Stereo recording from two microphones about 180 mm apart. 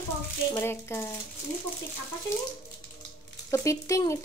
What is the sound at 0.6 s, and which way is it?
Speech, 15° left (ahead or behind).